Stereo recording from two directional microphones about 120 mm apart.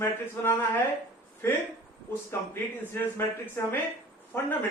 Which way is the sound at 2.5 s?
20° left (ahead or behind).